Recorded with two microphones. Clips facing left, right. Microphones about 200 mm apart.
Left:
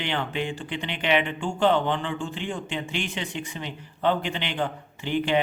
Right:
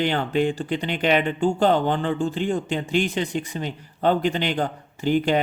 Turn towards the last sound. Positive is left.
turn(degrees=-40)  # may be behind; listen again after turning